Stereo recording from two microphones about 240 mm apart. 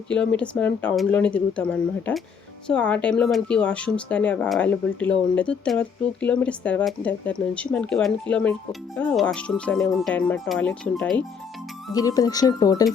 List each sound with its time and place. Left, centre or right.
0.1 s speech: centre